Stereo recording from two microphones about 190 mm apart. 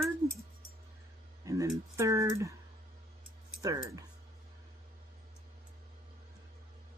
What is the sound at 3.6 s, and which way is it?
Speech, 15° right (ahead or behind).